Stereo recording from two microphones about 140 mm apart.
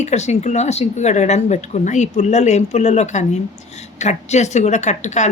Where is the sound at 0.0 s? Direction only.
55° left (ahead or behind).